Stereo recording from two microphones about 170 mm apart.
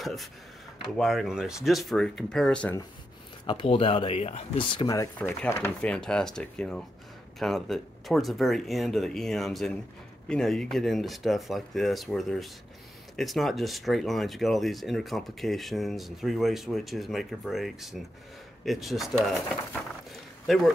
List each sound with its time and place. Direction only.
0.0 s speech: centre (ahead or behind)
3.4 s speech: 30° left (ahead or behind); by 20.7 s centre (ahead or behind)